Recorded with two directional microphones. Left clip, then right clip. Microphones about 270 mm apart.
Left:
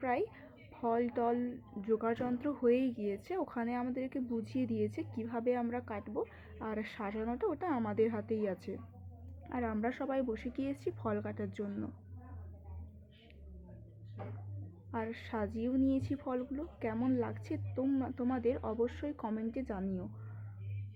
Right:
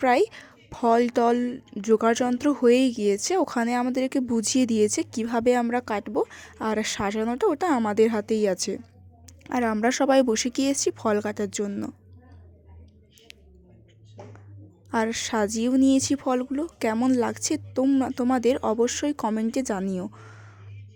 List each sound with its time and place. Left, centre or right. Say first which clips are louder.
0.0 s a woman's voice: right 14 dB; right
14.8 s a woman's voice: right 15 dB; right